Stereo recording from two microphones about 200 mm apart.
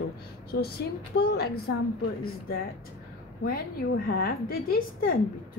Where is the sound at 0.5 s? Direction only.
50° left (ahead or behind).